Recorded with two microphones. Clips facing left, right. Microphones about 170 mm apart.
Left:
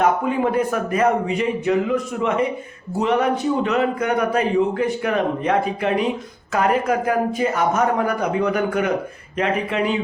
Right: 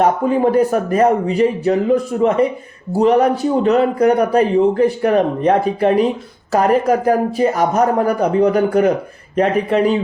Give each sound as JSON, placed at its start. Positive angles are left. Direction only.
{"t": 0.0, "sound": "a man's voice", "side_deg": -35}